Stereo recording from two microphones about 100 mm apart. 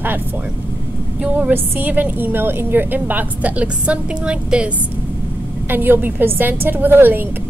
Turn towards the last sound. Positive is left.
turn(degrees=-20)  # may be behind; listen again after turning